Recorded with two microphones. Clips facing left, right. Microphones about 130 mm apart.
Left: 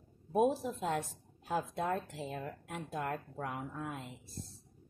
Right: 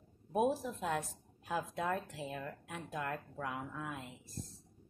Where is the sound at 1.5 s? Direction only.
30° left (ahead or behind).